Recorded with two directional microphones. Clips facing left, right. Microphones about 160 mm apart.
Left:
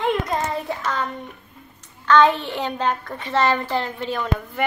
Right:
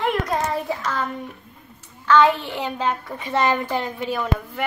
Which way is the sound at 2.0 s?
5° right (ahead or behind).